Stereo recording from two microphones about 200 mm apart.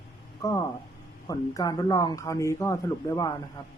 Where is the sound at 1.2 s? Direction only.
20° left (ahead or behind).